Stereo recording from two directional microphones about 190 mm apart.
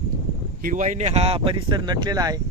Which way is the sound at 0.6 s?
45° right (ahead or behind).